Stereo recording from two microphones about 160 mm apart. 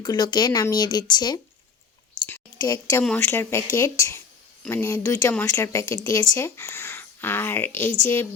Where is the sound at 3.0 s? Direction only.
15° left (ahead or behind).